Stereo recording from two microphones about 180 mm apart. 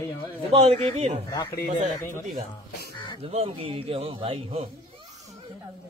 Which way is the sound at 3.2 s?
30° right (ahead or behind).